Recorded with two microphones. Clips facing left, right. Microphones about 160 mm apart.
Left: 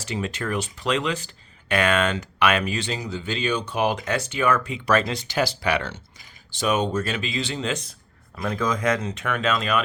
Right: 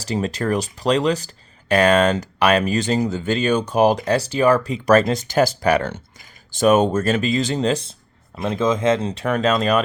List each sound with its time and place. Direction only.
0.0 s speech: 35° right (ahead or behind)